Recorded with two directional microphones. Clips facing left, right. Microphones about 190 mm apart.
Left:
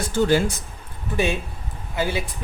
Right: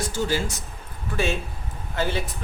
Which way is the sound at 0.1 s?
60° left (ahead or behind).